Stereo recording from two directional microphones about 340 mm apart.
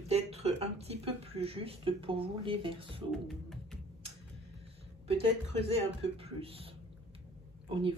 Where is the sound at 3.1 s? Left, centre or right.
Centre.